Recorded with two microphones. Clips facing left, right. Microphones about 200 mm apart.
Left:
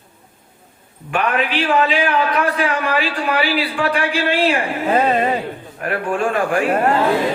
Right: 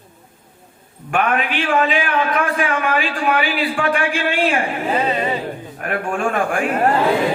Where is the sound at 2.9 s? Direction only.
35° left (ahead or behind).